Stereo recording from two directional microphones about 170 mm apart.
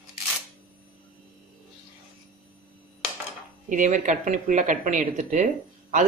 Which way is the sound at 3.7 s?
50° right (ahead or behind).